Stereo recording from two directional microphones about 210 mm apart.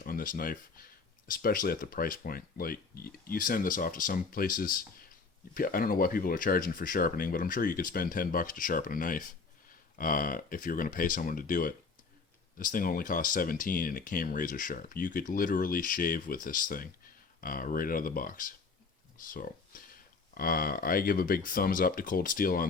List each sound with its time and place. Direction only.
0.0 s speech: 40° left (ahead or behind)